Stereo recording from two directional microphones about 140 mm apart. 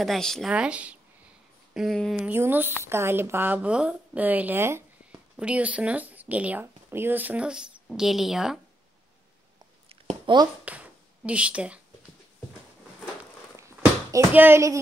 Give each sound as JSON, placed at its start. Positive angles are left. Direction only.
{"t": 0.0, "sound": "speech", "side_deg": 0}
{"t": 0.5, "sound": "speech", "side_deg": -10}
{"t": 2.2, "sound": "speech", "side_deg": -15}
{"t": 10.2, "sound": "speech", "side_deg": -30}
{"t": 10.6, "sound": "speech", "side_deg": -10}
{"t": 13.6, "sound": "a sound", "side_deg": -20}